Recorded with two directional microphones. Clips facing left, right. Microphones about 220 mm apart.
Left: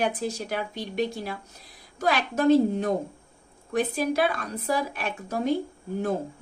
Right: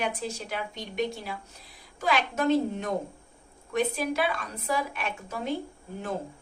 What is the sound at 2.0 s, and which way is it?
Speech, 40° left (ahead or behind).